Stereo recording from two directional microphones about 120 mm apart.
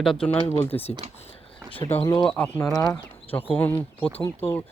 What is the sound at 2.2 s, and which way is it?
Speech, 10° left (ahead or behind).